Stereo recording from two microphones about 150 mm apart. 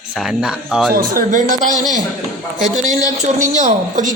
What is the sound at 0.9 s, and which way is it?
Speech, 65° right (ahead or behind).